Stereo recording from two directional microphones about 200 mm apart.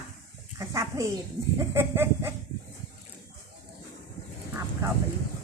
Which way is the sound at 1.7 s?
10° right (ahead or behind).